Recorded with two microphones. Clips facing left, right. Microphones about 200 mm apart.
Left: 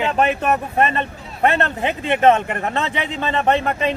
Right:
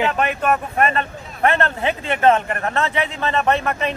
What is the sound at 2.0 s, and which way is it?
Speech, 20° left (ahead or behind).